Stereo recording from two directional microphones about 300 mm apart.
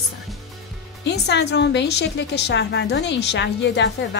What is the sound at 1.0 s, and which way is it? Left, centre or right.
A woman's voice, left.